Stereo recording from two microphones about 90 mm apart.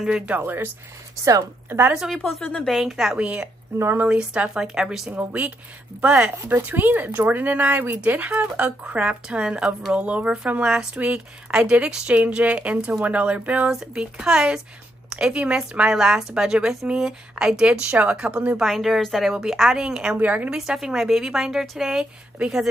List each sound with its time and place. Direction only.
0.0 s speech: 10° right (ahead or behind)
0.4 s speech: 25° right (ahead or behind)
1.7 s speech: 25° right (ahead or behind)
2.1 s a woman's voice: 15° left (ahead or behind)
2.6 s a woman's voice: centre (ahead or behind)
3.7 s speech: 25° right (ahead or behind)
4.1 s a woman's voice: 15° right (ahead or behind)